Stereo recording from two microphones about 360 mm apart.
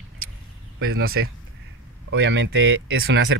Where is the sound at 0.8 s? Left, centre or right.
Right.